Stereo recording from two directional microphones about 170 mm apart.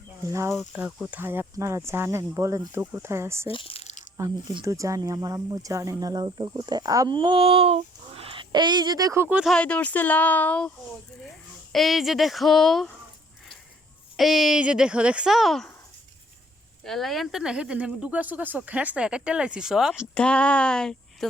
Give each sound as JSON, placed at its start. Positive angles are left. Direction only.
{"t": 0.3, "sound": "speech", "side_deg": -15}
{"t": 0.5, "sound": "speech", "side_deg": -5}
{"t": 3.5, "sound": "a sound", "side_deg": 30}
{"t": 4.5, "sound": "speech", "side_deg": -20}
{"t": 9.4, "sound": "speech", "side_deg": 5}
{"t": 11.7, "sound": "speech", "side_deg": 0}
{"t": 14.2, "sound": "speech", "side_deg": 0}
{"t": 16.8, "sound": "speech", "side_deg": 0}